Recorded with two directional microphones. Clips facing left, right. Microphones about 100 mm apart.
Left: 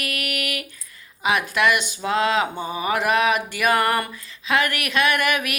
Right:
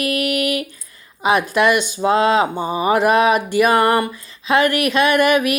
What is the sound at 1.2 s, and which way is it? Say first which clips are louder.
Speech: right 5 dB; 30° right (ahead or behind).